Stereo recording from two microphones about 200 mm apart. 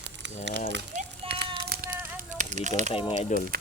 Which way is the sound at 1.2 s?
30° right (ahead or behind).